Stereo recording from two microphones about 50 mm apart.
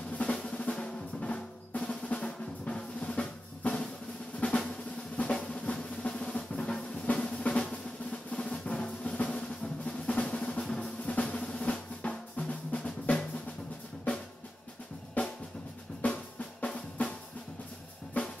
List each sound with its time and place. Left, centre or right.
0.2 s drum: left
5.3 s drum: centre
15.2 s drum: left